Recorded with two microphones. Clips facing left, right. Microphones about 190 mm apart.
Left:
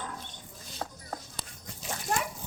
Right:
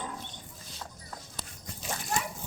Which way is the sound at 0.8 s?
60° left (ahead or behind).